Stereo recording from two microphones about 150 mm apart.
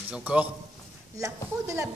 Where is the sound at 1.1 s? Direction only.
20° right (ahead or behind).